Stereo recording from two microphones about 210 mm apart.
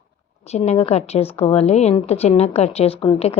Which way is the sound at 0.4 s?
30° left (ahead or behind).